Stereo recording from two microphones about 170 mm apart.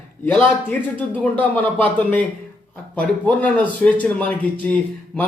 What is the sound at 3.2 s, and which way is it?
Speech, 10° left (ahead or behind).